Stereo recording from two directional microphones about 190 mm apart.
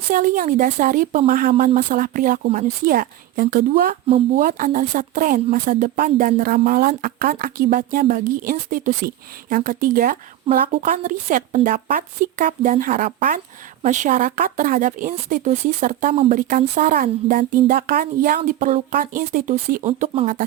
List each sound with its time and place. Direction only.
0.1 s speech: 45° right (ahead or behind)
2.4 s speech: 35° right (ahead or behind)
10.5 s a woman's voice: 30° right (ahead or behind)
10.8 s speech: 45° right (ahead or behind)